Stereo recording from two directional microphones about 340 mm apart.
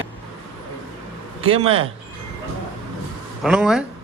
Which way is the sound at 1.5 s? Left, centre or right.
Centre.